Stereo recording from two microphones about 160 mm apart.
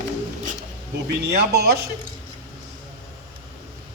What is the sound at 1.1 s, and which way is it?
Speech, 85° right.